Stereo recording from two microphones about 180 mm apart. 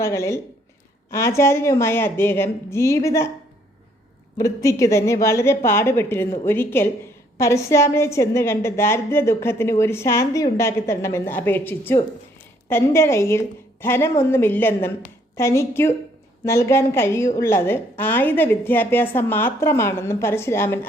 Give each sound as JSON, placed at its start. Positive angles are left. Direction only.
{"t": 0.0, "sound": "a woman's voice", "side_deg": 15}
{"t": 4.4, "sound": "a woman's voice", "side_deg": 15}